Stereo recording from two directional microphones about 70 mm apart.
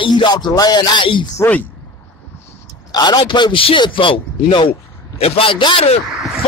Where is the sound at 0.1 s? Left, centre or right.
Left.